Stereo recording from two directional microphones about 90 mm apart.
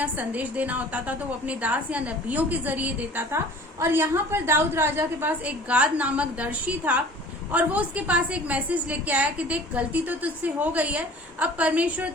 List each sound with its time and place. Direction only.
0.0 s a woman's voice: 15° right (ahead or behind)